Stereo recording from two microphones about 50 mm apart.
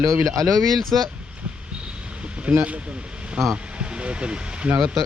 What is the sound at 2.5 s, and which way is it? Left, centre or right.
Speech, right.